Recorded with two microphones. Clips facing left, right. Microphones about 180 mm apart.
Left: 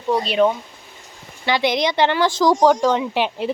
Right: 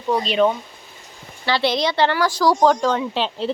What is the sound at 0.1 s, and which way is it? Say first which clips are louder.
A woman's voice: left 1 dB; 10° left (ahead or behind).